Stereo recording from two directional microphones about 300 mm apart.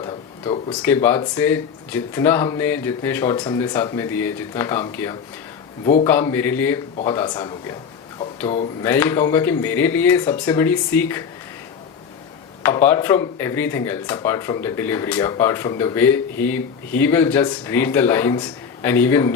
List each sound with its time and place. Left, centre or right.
0.0 s a sound: centre
0.8 s speech: centre
5.8 s a man's voice: centre
6.1 s speech: centre
8.8 s speech: centre
12.6 s speech: centre